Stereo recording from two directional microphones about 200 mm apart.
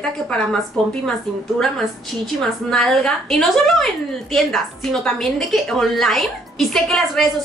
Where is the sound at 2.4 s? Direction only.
5° left (ahead or behind).